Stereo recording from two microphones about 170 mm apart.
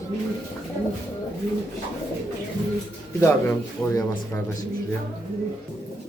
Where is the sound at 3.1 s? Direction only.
15° left (ahead or behind).